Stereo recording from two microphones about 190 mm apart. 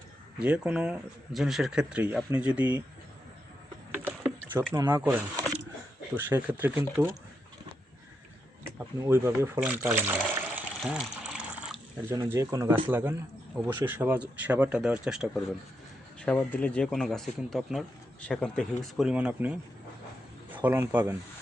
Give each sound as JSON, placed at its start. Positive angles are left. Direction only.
{"t": 0.3, "sound": "speech", "side_deg": -5}
{"t": 4.7, "sound": "speech", "side_deg": -15}
{"t": 5.0, "sound": "a sound", "side_deg": -10}
{"t": 6.1, "sound": "speech", "side_deg": -10}
{"t": 8.6, "sound": "water", "side_deg": -10}
{"t": 12.1, "sound": "speech", "side_deg": -15}
{"t": 16.2, "sound": "a man's voice", "side_deg": 10}